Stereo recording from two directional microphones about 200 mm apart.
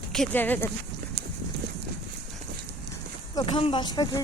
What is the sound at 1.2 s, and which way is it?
Clip-clop, 55° right (ahead or behind).